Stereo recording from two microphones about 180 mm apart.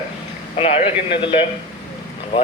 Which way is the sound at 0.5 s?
35° left (ahead or behind).